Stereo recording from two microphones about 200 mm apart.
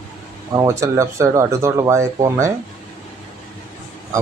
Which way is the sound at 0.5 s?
15° right (ahead or behind).